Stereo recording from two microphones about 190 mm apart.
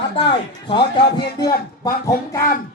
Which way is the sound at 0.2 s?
25° left (ahead or behind).